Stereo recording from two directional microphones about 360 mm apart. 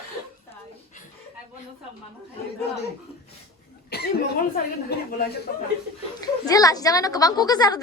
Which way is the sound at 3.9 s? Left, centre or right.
Left.